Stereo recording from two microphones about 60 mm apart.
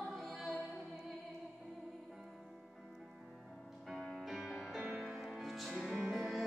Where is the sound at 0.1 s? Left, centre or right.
Centre.